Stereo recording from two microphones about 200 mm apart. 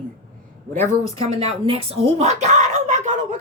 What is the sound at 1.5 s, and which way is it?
Speech, 30° right (ahead or behind).